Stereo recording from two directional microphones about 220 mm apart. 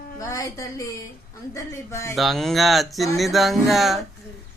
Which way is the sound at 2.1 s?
Centre (ahead or behind).